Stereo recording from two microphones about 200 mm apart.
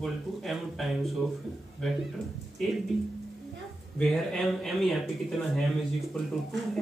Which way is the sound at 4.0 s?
Centre (ahead or behind).